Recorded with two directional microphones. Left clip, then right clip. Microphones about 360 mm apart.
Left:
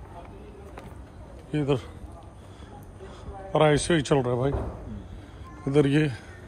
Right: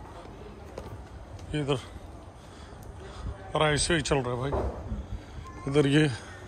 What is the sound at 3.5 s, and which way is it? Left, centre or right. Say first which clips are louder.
A man's voice: left 4 dB; centre.